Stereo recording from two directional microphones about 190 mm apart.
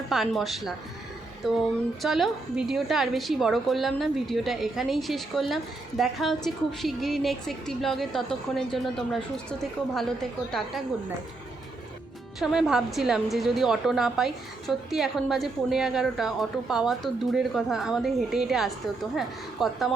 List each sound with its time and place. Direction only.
0.1 s a woman's voice: centre (ahead or behind)
12.4 s a woman's voice: centre (ahead or behind)